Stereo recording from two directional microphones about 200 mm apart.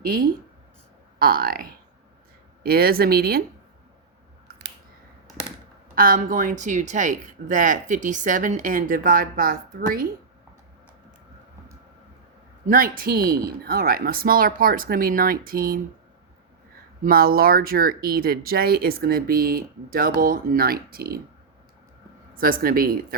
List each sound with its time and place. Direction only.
0.0 s speech: 45° right (ahead or behind)
5.9 s speech: 45° right (ahead or behind)
12.6 s speech: 45° right (ahead or behind)
17.0 s speech: 50° right (ahead or behind)
22.4 s speech: 45° right (ahead or behind)